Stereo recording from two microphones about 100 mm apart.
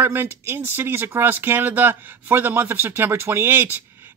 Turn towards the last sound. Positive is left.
turn(degrees=-25)  # may be behind; listen again after turning